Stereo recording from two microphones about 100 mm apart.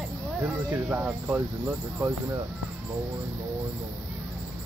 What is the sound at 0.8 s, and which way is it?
Speech, 15° right (ahead or behind).